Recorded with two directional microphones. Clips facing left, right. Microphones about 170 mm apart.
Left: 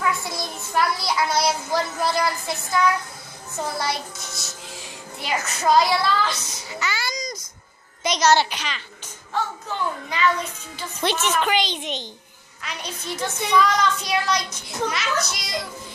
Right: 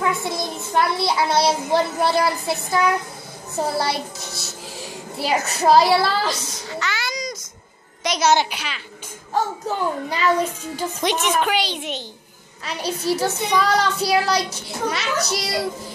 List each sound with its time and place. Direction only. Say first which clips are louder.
0.0 s a child's voice: right 3 dB; 25° right (ahead or behind)
6.7 s a sound: right 1 dB; 5° left (ahead or behind)
8.4 s a woman's voice: even; 10° right (ahead or behind)
9.3 s a child's voice: right 5 dB; 40° right (ahead or behind)
11.0 s a woman's voice: right 1 dB; 15° right (ahead or behind)
12.6 s a child's voice: right 9 dB; 35° right (ahead or behind)